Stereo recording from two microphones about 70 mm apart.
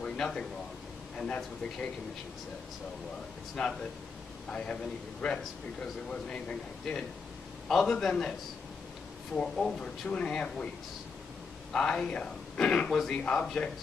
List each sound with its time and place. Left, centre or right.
0.0 s a sound: centre
1.1 s speech: centre
3.6 s a man's voice: centre
5.8 s speech: centre
6.9 s a man's voice: centre
11.7 s speech: centre